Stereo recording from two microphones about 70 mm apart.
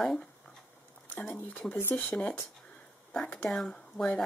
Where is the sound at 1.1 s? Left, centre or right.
Left.